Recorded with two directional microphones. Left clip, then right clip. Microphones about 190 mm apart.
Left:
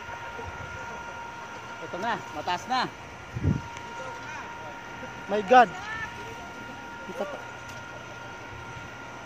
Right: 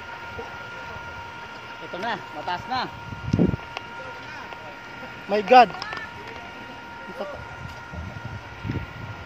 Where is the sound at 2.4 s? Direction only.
50° left (ahead or behind).